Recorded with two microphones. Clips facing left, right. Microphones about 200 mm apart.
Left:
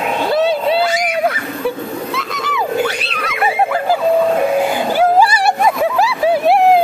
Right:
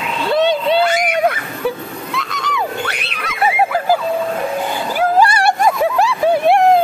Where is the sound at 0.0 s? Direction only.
50° left (ahead or behind).